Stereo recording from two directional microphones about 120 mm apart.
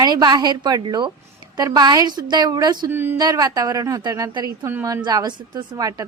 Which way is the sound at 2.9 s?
15° right (ahead or behind).